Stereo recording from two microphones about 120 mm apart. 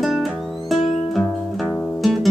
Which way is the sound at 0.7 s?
55° left (ahead or behind).